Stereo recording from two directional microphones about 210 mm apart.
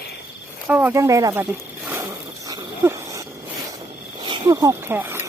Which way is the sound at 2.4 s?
15° right (ahead or behind).